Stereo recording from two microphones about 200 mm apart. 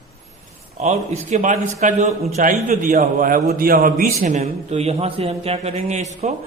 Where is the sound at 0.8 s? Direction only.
35° right (ahead or behind).